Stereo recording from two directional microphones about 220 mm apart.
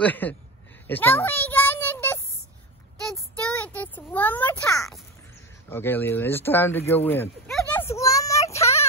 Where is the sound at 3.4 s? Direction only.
5° left (ahead or behind).